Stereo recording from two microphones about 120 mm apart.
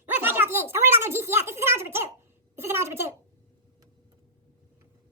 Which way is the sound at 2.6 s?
20° right (ahead or behind).